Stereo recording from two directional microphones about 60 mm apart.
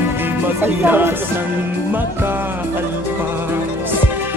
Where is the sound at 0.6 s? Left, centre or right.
Right.